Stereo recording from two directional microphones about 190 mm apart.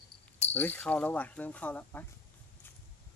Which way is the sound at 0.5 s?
10° left (ahead or behind).